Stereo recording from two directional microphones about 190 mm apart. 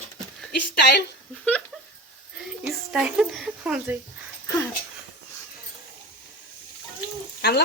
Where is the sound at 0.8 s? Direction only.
60° left (ahead or behind).